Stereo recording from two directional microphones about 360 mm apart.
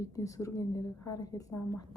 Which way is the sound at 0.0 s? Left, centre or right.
Centre.